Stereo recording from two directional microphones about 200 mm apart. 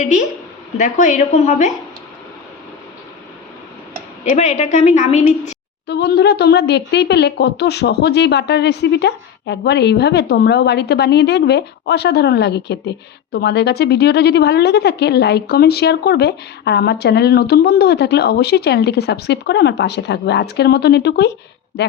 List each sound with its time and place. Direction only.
0.0 s a woman's voice: 40° left (ahead or behind)
4.3 s a woman's voice: 35° left (ahead or behind)
5.9 s a woman's voice: 55° left (ahead or behind)